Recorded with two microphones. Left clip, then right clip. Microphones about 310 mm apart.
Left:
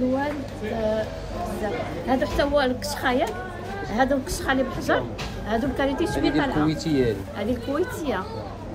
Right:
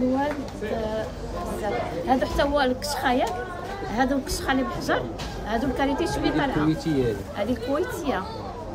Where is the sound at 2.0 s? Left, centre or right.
Centre.